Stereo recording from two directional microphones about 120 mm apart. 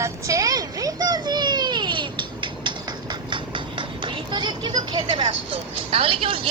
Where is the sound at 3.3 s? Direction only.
40° right (ahead or behind).